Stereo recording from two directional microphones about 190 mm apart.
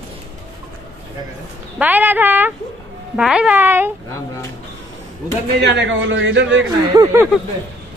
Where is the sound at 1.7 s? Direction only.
10° right (ahead or behind).